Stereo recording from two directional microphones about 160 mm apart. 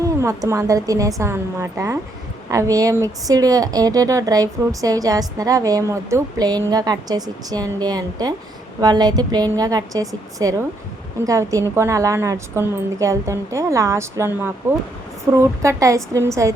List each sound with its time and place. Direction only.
0.0 s a woman's voice: 20° right (ahead or behind)